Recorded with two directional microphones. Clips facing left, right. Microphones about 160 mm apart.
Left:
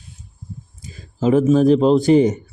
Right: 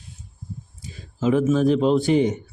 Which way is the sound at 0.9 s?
40° left (ahead or behind).